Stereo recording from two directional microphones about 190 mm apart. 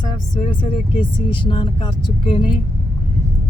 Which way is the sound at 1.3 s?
25° left (ahead or behind).